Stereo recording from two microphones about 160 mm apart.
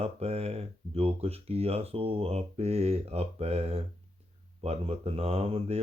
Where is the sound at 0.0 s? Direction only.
40° right (ahead or behind).